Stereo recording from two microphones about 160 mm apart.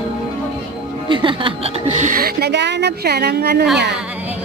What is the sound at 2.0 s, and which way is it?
Speech, 60° right (ahead or behind).